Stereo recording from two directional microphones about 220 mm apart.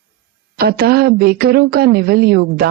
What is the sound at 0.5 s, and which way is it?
A woman's voice, 45° right (ahead or behind).